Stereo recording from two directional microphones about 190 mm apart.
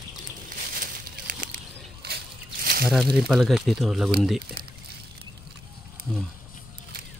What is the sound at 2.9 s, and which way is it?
Speech, centre (ahead or behind).